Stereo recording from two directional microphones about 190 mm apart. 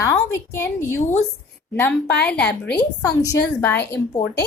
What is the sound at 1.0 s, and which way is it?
Speech, 35° left (ahead or behind).